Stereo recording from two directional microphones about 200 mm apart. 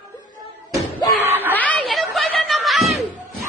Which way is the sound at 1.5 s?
5° left (ahead or behind).